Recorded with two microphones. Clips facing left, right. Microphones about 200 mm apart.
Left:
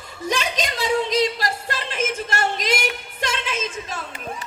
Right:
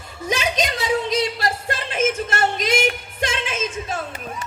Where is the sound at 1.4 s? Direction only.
50° right (ahead or behind).